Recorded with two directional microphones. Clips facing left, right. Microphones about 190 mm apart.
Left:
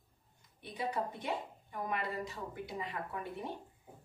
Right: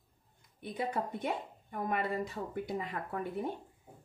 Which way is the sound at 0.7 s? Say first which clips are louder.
Right 2 dB; 50° right (ahead or behind).